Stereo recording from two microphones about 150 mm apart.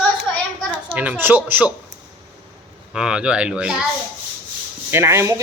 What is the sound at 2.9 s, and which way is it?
Speech, 5° right (ahead or behind).